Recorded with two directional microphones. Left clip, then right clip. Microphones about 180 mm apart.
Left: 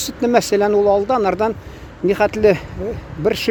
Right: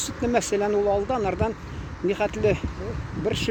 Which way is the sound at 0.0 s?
40° left (ahead or behind).